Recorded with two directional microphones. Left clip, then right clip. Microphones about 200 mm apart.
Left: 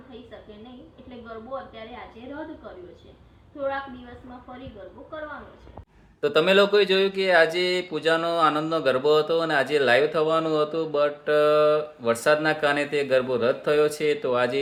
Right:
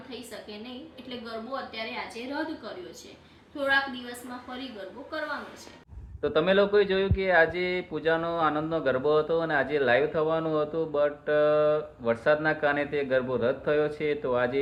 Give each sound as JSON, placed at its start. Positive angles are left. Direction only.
{"t": 6.2, "sound": "speech", "side_deg": 20}